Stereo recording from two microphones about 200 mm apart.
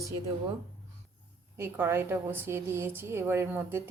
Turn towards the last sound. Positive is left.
turn(degrees=-10)  # may be behind; listen again after turning